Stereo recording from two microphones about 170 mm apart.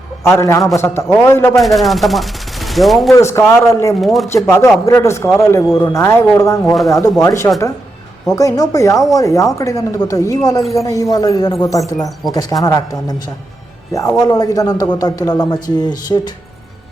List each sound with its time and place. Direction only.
0.2 s speech: 15° left (ahead or behind)
1.6 s speech: centre (ahead or behind)
3.1 s speech: 15° left (ahead or behind)
4.0 s speech: centre (ahead or behind)
4.3 s speech: 15° left (ahead or behind)
14.2 s speech: 20° left (ahead or behind)